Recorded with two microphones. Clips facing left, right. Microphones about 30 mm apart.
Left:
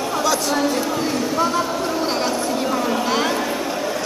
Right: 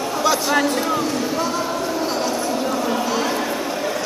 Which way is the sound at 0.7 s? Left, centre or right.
Centre.